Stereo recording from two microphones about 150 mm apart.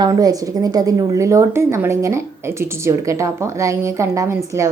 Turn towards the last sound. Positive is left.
turn(degrees=-20)  # may be behind; listen again after turning